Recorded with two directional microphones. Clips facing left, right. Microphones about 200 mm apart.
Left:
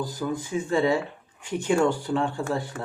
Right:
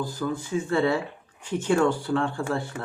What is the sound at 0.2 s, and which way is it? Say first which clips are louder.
Speech: right 1 dB; 15° left (ahead or behind).